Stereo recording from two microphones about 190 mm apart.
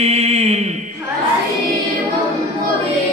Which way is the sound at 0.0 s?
35° right (ahead or behind).